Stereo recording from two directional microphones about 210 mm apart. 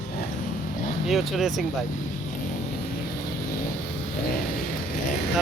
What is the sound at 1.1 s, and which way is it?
Speech, centre (ahead or behind).